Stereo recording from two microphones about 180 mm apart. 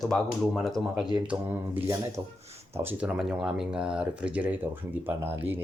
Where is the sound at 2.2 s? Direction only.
20° right (ahead or behind).